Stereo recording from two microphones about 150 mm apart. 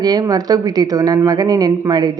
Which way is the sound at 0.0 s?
25° right (ahead or behind).